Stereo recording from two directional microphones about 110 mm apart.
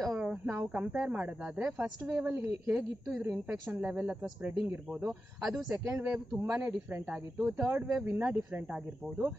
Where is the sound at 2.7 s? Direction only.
5° right (ahead or behind).